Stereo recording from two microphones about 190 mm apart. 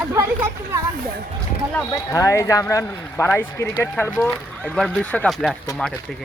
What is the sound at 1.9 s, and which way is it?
Speech, 20° left (ahead or behind).